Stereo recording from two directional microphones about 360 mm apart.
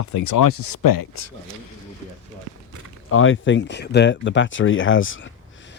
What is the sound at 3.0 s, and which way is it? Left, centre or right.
Speech, left.